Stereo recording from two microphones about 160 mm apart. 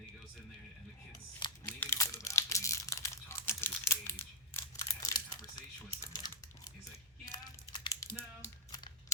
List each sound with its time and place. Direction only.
1.4 s crumpling: 30° left (ahead or behind)
1.8 s crumpling: 15° left (ahead or behind)
7.3 s a sound: 25° left (ahead or behind)